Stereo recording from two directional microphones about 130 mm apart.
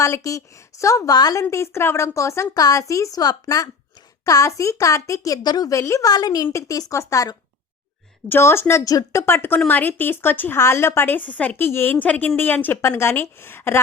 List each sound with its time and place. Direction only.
0.0 s a woman's voice: 25° left (ahead or behind)